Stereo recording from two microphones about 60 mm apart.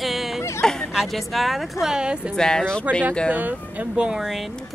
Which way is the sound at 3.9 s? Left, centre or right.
Centre.